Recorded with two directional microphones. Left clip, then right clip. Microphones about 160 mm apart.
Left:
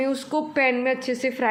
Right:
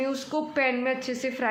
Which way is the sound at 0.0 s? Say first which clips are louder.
Left 4 dB; 20° left (ahead or behind).